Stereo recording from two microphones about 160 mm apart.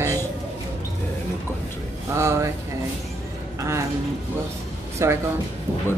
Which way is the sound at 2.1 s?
15° right (ahead or behind).